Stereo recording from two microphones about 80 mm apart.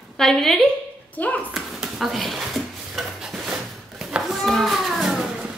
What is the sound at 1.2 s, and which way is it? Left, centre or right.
Speech, centre.